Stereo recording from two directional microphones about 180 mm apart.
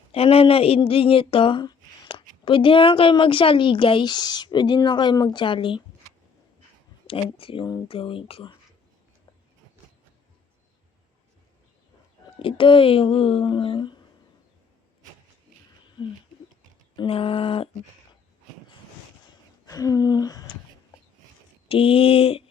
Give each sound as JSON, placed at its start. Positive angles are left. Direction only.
{"t": 0.1, "sound": "speech", "side_deg": 35}
{"t": 7.3, "sound": "speech", "side_deg": 30}
{"t": 12.4, "sound": "speech", "side_deg": 30}
{"t": 17.0, "sound": "speech", "side_deg": 30}
{"t": 19.6, "sound": "a sound", "side_deg": 20}
{"t": 21.7, "sound": "speech", "side_deg": 30}